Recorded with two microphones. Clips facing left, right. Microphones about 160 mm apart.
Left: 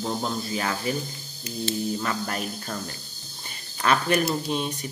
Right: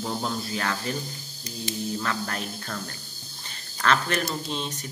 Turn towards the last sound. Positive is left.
turn(degrees=10)  # may be behind; listen again after turning